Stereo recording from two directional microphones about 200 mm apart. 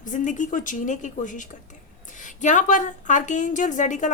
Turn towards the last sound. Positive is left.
turn(degrees=40)  # may be behind; listen again after turning